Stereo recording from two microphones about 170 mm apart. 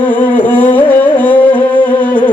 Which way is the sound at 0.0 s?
10° left (ahead or behind).